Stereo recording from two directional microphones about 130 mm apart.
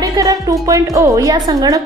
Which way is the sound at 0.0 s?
30° right (ahead or behind).